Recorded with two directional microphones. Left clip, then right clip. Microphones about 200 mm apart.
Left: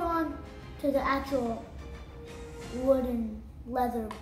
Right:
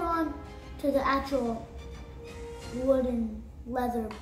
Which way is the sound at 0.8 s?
10° right (ahead or behind).